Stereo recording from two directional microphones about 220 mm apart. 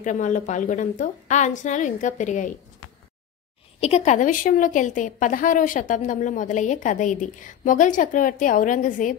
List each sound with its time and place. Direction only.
0.0 s a woman's voice: 35° left (ahead or behind)
3.8 s a woman's voice: 30° left (ahead or behind)